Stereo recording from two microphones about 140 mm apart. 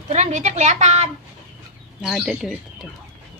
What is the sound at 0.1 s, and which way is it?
A woman's voice, 55° right (ahead or behind).